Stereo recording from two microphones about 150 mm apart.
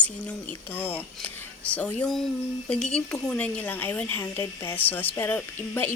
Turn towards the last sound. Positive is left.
turn(degrees=15)  # may be behind; listen again after turning